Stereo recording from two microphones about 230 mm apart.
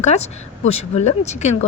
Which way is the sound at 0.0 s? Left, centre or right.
Left.